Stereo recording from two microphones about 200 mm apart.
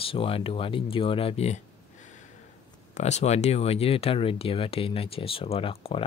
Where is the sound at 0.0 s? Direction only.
25° left (ahead or behind).